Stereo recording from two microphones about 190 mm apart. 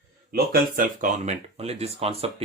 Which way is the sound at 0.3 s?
50° right (ahead or behind).